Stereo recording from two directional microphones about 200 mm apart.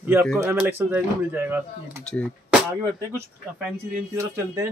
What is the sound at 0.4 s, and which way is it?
Speech, 10° right (ahead or behind).